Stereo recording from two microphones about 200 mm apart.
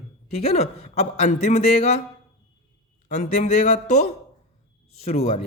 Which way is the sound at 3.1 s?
35° left (ahead or behind).